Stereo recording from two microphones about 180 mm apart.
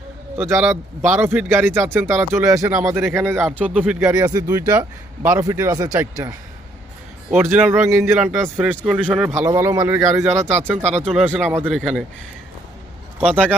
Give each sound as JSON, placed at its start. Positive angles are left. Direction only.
{"t": 0.3, "sound": "speech", "side_deg": -10}
{"t": 7.3, "sound": "speech", "side_deg": -10}
{"t": 9.3, "sound": "speech", "side_deg": -15}
{"t": 10.8, "sound": "speech", "side_deg": -40}
{"t": 11.1, "sound": "speech", "side_deg": -5}
{"t": 13.1, "sound": "speech", "side_deg": -5}